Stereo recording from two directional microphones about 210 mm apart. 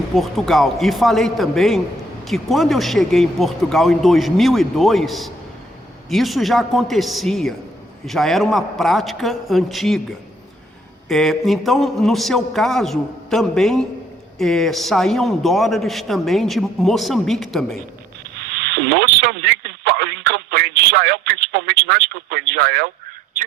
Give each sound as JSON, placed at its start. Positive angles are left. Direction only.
{"t": 0.2, "sound": "a man's voice", "side_deg": 0}
{"t": 11.1, "sound": "a man's voice", "side_deg": 0}
{"t": 18.3, "sound": "speech", "side_deg": -50}